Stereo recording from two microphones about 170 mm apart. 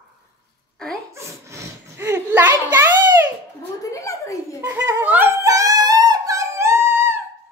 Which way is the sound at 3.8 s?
20° left (ahead or behind).